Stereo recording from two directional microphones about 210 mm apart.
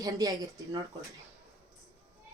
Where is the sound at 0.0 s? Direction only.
15° right (ahead or behind).